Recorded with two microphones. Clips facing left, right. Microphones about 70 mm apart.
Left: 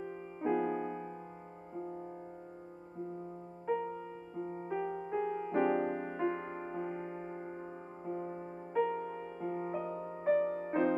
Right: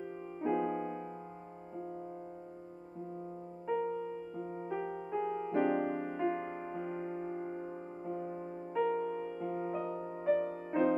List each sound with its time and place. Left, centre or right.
0.0 s music: centre
3.7 s music: centre